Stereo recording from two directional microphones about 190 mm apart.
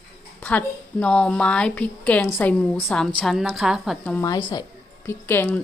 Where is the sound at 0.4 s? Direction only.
5° left (ahead or behind).